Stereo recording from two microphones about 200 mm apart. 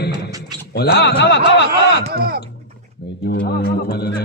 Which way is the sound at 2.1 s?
50° right (ahead or behind).